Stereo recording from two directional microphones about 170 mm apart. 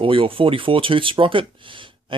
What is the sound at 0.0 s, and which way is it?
Speech, 30° right (ahead or behind).